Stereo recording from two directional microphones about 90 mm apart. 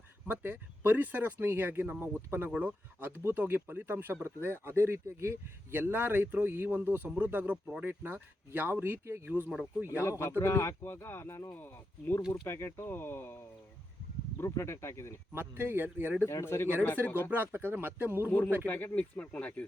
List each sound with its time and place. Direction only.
0.3 s speech: 20° right (ahead or behind)
9.5 s speech: 5° right (ahead or behind)
9.9 s speech: 30° left (ahead or behind)
15.3 s speech: 25° right (ahead or behind)
16.2 s speech: 30° left (ahead or behind)
17.2 s speech: 20° right (ahead or behind)
18.3 s speech: 20° left (ahead or behind)